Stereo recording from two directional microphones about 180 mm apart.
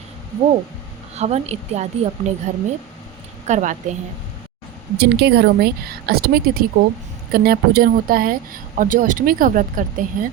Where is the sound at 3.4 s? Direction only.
40° right (ahead or behind).